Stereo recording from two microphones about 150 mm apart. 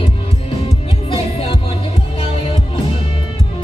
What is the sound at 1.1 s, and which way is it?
Music, 40° left (ahead or behind).